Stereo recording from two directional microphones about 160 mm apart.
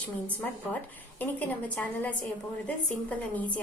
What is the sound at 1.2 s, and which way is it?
A woman's voice, 10° left (ahead or behind).